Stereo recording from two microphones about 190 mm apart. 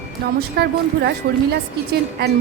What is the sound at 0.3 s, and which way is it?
A woman's voice, 60° right (ahead or behind).